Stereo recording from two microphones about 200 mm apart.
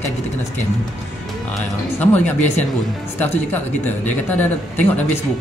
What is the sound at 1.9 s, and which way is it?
Speech, 10° left (ahead or behind).